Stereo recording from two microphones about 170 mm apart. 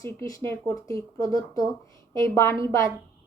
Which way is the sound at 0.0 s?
20° left (ahead or behind).